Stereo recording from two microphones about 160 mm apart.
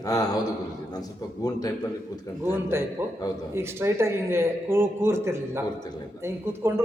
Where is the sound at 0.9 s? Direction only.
25° left (ahead or behind).